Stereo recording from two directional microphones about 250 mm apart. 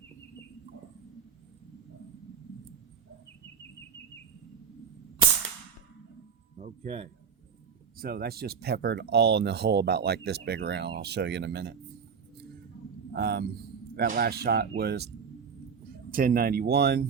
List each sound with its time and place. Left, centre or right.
6.6 s speech: right
7.9 s speech: right
13.1 s speech: right
16.1 s speech: right